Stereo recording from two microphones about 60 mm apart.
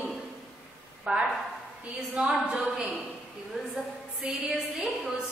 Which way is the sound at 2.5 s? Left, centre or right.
Centre.